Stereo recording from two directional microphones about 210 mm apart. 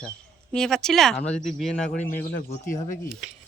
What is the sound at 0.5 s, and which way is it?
Speech, 5° left (ahead or behind).